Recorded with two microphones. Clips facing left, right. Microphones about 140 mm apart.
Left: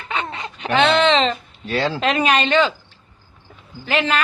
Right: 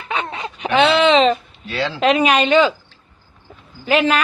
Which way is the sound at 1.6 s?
40° left (ahead or behind).